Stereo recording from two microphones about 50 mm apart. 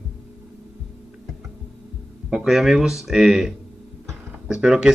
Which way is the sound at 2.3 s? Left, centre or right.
Centre.